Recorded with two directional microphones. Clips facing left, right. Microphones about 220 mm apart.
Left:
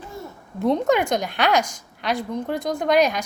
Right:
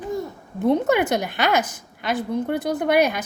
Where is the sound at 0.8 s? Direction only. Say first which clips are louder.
Even; 5° right (ahead or behind).